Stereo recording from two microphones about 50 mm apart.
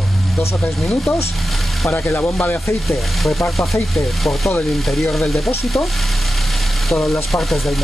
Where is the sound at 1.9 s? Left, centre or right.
Left.